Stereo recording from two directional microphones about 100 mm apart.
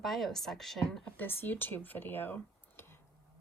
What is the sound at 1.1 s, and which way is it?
Speech, 20° left (ahead or behind).